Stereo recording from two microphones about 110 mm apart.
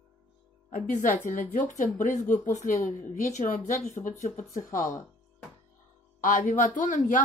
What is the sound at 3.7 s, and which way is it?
Speech, 90° left.